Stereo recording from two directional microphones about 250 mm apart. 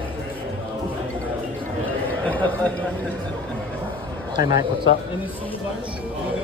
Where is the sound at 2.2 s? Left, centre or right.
Centre.